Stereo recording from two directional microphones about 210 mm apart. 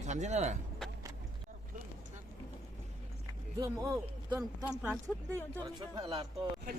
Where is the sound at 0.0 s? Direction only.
35° right (ahead or behind).